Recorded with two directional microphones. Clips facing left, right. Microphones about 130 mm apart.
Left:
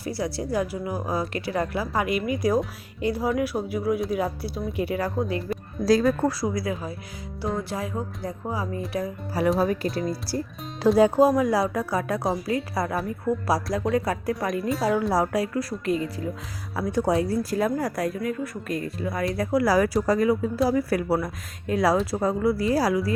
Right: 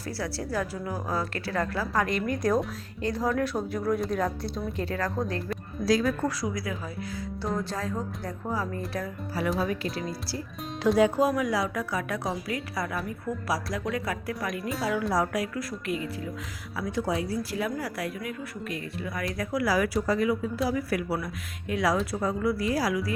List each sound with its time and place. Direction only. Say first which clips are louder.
0.0 s a woman's voice: left 4 dB; 15° left (ahead or behind)
5.8 s speech: left 5 dB; 35° left (ahead or behind)
7.7 s a woman's voice: left 2 dB; 15° left (ahead or behind)
9.6 s speech: left 5 dB; 40° left (ahead or behind)